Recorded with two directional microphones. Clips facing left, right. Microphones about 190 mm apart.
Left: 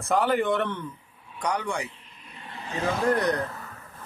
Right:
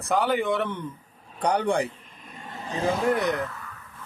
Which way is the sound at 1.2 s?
35° right (ahead or behind).